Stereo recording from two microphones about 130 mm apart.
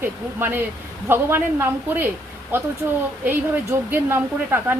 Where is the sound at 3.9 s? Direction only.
15° right (ahead or behind).